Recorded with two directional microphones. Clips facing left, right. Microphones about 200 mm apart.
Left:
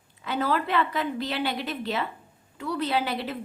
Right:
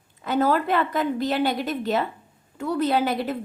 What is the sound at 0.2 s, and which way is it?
A woman's voice, 45° right (ahead or behind).